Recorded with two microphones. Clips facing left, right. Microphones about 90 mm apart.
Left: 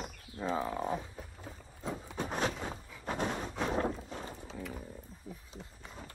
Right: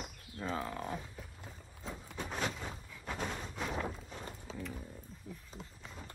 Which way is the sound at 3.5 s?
35° left (ahead or behind).